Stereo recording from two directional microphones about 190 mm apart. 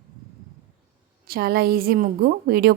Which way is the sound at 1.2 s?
55° right (ahead or behind).